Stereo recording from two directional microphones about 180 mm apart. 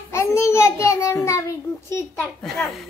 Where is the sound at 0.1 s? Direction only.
15° left (ahead or behind).